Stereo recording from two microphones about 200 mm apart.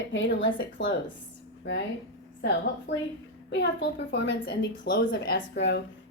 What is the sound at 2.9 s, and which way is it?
Speech, 65° left (ahead or behind).